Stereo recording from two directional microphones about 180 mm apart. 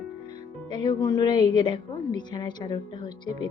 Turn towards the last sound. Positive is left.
turn(degrees=25)  # may be behind; listen again after turning